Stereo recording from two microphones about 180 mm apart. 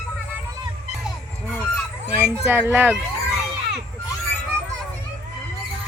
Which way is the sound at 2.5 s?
10° right (ahead or behind).